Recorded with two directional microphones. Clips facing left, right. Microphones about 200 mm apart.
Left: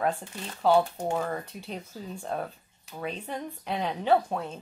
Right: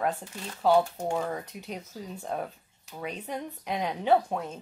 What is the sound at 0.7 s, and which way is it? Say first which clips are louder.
Speech: even; 10° right (ahead or behind).